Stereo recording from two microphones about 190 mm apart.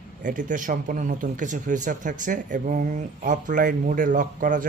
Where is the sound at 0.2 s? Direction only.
45° right (ahead or behind).